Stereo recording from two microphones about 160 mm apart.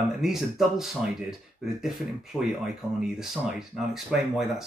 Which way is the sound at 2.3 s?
5° right (ahead or behind).